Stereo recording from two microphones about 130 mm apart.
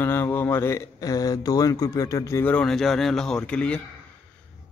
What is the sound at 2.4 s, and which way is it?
A man's voice, 10° left (ahead or behind).